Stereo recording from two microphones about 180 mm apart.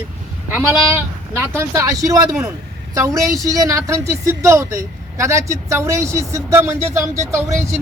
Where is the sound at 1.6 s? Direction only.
15° right (ahead or behind).